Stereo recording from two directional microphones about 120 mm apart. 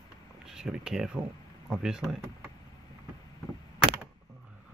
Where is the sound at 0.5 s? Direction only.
5° right (ahead or behind).